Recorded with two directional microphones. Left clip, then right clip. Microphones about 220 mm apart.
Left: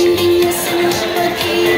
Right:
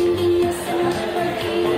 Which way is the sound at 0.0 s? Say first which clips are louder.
Left 6 dB; 30° left (ahead or behind).